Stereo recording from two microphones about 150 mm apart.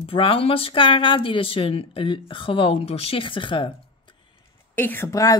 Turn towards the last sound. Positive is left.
turn(degrees=20)  # may be behind; listen again after turning